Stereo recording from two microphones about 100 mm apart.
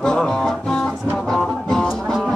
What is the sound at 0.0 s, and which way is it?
Music, 5° left (ahead or behind).